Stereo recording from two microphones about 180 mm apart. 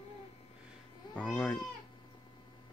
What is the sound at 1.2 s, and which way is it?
Speech, 10° left (ahead or behind).